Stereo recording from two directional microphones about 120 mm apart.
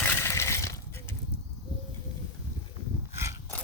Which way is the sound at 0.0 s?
20° left (ahead or behind).